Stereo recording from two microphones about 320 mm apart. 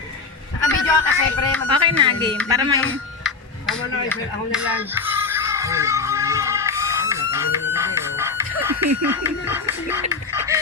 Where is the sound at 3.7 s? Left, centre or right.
Left.